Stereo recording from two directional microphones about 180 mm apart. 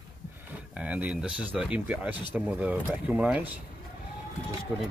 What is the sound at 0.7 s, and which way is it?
Speech, 5° right (ahead or behind).